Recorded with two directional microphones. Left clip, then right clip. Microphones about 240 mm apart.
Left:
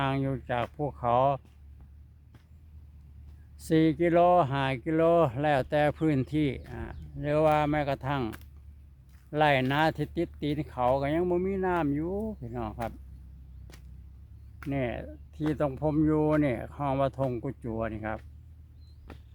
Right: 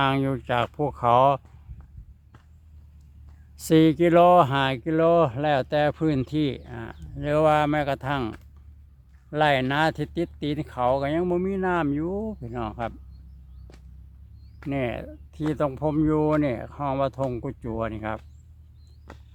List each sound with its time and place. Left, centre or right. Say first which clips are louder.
0.0 s speech: right 7 dB; right
3.6 s speech: right 6 dB; right
9.3 s speech: right 3 dB; centre
13.7 s a sound: right 1 dB; centre
14.7 s speech: right 4 dB; centre